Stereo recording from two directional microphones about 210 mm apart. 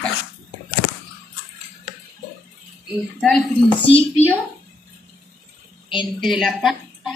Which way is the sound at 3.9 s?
25° left (ahead or behind).